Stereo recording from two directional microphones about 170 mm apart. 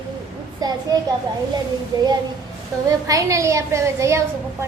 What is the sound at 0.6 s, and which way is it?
Speech, 20° right (ahead or behind).